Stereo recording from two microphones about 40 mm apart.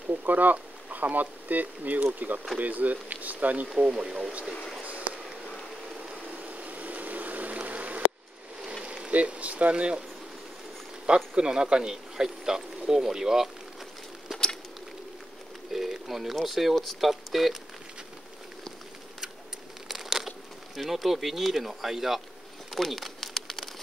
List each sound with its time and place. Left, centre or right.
0.1 s speech: right
3.6 s speech: right
4.8 s a sound: right
6.0 s vehicle: right
9.1 s speech: right
11.3 s speech: right
15.7 s a sound: centre
16.4 s speech: centre
19.9 s speech: centre
22.8 s crumpling: centre